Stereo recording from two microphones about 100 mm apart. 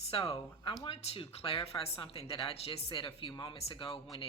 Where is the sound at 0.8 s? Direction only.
65° left (ahead or behind).